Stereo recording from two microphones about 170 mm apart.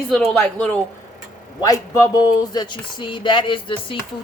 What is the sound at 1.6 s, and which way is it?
Speech, 20° left (ahead or behind).